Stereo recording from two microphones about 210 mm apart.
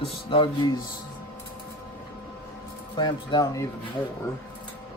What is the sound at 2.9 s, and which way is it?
Speech, 20° left (ahead or behind).